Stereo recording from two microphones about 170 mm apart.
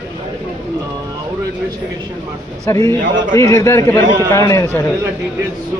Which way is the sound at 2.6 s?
20° left (ahead or behind).